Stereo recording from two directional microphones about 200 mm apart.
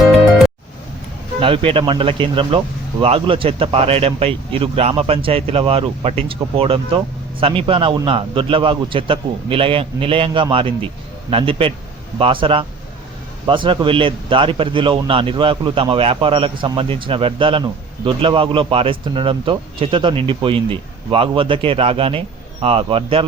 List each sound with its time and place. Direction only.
1.4 s speech: 25° right (ahead or behind)